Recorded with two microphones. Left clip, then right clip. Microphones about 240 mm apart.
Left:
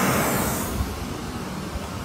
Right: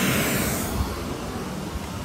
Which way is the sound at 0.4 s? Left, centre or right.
Centre.